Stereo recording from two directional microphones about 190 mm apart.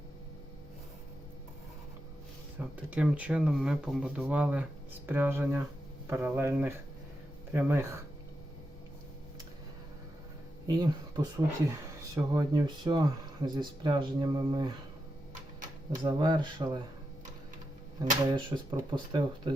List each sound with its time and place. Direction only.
2.6 s speech: 5° right (ahead or behind)
10.7 s speech: 20° right (ahead or behind)
16.0 s speech: 25° right (ahead or behind)
18.0 s speech: 25° right (ahead or behind)